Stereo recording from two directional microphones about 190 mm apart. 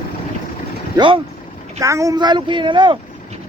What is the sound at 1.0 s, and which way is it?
Speech, 25° right (ahead or behind).